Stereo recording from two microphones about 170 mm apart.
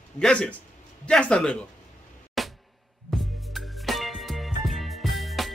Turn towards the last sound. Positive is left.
turn(degrees=0)  # may be behind; listen again after turning